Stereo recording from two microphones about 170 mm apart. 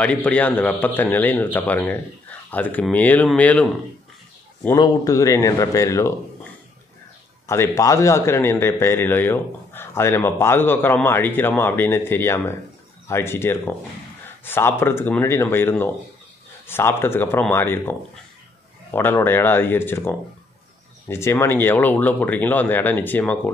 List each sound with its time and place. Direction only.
0.0 s a man's voice: 10° left (ahead or behind)
4.7 s speech: 25° left (ahead or behind)
7.4 s a man's voice: 15° left (ahead or behind)
18.9 s a man's voice: 15° left (ahead or behind)